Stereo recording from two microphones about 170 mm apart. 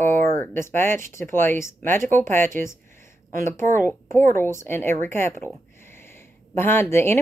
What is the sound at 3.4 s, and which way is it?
Speech, 15° left (ahead or behind).